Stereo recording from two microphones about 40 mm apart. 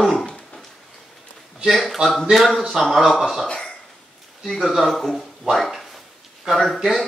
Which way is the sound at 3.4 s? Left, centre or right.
Centre.